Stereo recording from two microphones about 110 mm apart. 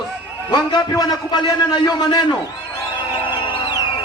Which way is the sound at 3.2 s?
50° left (ahead or behind).